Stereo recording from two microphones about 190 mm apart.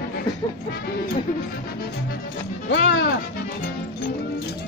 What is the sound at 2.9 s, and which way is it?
Music, 65° left (ahead or behind).